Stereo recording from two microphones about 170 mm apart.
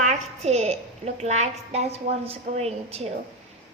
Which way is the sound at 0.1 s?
40° right (ahead or behind).